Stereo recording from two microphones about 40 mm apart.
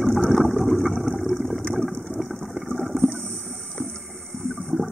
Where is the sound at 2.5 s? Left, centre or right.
Centre.